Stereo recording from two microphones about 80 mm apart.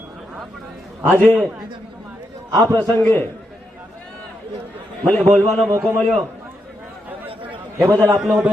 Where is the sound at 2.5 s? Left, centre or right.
Right.